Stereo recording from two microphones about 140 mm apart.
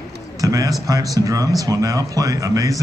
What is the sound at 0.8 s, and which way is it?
Speech, 25° right (ahead or behind).